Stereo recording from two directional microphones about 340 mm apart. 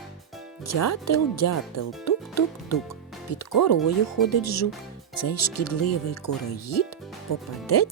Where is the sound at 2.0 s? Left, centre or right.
Left.